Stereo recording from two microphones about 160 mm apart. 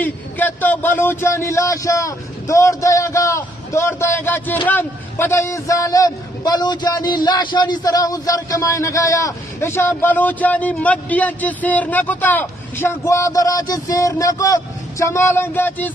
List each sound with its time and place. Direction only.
0.0 s a man's voice: 10° left (ahead or behind)